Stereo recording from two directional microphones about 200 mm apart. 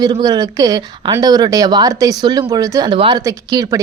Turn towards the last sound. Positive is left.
turn(degrees=-20)  # may be behind; listen again after turning